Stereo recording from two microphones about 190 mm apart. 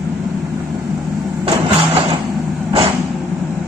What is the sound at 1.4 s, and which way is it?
Music, 25° right (ahead or behind).